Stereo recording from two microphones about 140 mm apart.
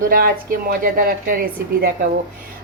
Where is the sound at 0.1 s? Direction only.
90° right.